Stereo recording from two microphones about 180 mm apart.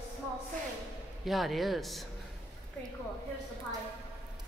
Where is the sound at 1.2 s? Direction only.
Centre (ahead or behind).